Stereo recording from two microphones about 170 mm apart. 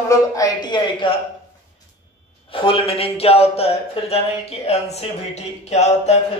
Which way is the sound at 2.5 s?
30° left (ahead or behind).